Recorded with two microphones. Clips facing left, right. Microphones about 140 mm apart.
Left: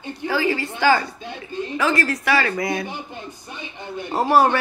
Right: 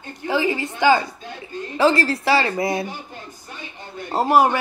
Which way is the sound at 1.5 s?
25° left (ahead or behind).